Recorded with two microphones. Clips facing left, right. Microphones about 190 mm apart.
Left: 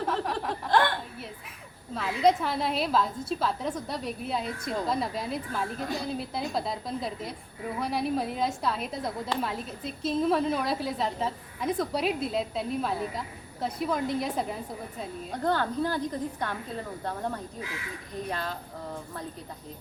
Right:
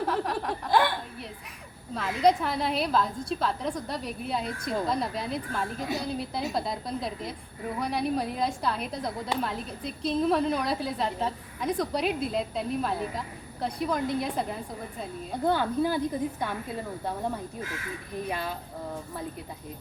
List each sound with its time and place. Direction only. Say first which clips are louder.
0.0 s chuckle: right 1 dB; 5° right (ahead or behind)
2.0 s a woman's voice: even; centre (ahead or behind)